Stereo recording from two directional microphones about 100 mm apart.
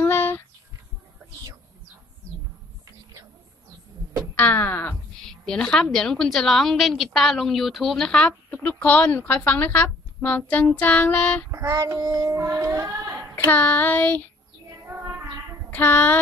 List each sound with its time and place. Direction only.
0.0 s a sound: 25° left (ahead or behind)
4.4 s wail: 20° left (ahead or behind)
5.4 s a woman's voice: 10° left (ahead or behind)
11.5 s child singing: 30° right (ahead or behind)
13.5 s a woman's voice: 15° left (ahead or behind)
14.9 s child singing: 20° right (ahead or behind)
15.7 s wail: 20° left (ahead or behind)